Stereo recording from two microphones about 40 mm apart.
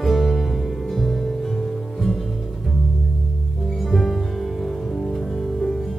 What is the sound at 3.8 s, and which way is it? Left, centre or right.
Music, centre.